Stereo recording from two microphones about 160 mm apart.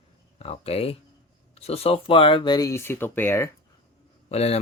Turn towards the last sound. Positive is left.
turn(degrees=40)  # may be behind; listen again after turning